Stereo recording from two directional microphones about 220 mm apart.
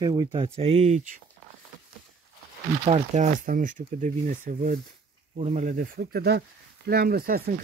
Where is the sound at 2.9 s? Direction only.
30° right (ahead or behind).